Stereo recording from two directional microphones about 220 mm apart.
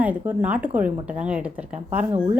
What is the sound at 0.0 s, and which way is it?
A woman's voice, 5° right (ahead or behind).